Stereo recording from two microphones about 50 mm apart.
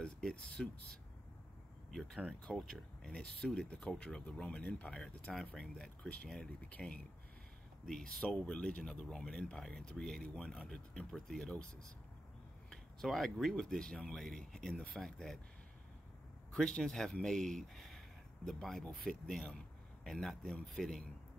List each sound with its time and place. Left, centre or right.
0.0 s speech: centre
1.9 s speech: centre; by 4.9 s left
5.3 s speech: centre
5.6 s speech: left
6.2 s speech: centre
7.8 s speech: centre
13.0 s speech: centre
16.6 s speech: centre
16.9 s speech: centre